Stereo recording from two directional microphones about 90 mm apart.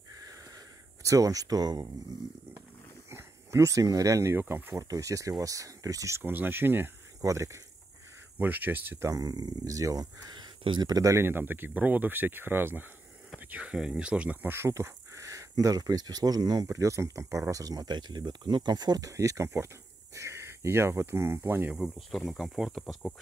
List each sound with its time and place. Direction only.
1.0 s speech: 40° right (ahead or behind)
3.1 s speech: 30° right (ahead or behind)
4.8 s speech: 40° right (ahead or behind); by 6.9 s 25° right (ahead or behind)
7.2 s speech: 35° right (ahead or behind)
8.4 s speech: 20° right (ahead or behind)
9.1 s speech: 45° right (ahead or behind)
11.2 s speech: 25° right (ahead or behind); by 16.6 s 45° right (ahead or behind)
16.6 s speech: 35° right (ahead or behind)
21.7 s speech: 5° right (ahead or behind)